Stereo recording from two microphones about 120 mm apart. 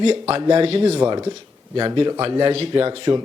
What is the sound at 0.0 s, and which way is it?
Speech, 55° right (ahead or behind).